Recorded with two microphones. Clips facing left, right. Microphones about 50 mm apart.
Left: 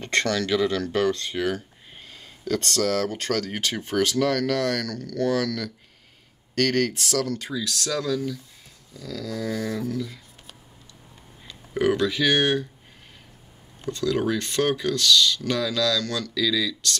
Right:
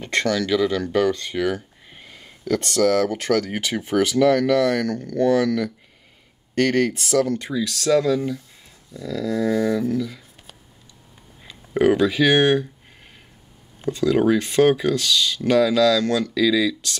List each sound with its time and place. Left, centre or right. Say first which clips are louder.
0.0 s speech: right 2 dB; centre
2.0 s a sound: right 4 dB; centre
2.6 s speech: right 7 dB; centre; by 9.9 s right
9.9 s a sound: right 5 dB; centre
11.4 s speech: right 5 dB; centre
13.7 s speech: right 6 dB; centre